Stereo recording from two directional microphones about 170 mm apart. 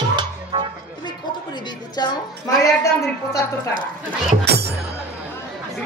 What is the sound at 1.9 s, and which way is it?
Speech, 25° left (ahead or behind).